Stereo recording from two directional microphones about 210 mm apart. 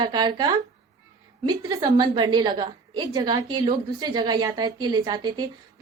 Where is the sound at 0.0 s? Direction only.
20° right (ahead or behind).